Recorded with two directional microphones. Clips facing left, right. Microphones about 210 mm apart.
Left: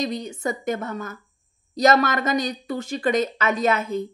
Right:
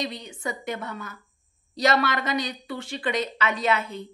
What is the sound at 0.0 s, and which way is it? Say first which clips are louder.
Speech: left 6 dB; 45° left (ahead or behind).